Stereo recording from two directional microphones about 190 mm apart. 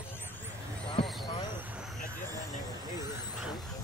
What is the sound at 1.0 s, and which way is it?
Basketball bounce, centre (ahead or behind).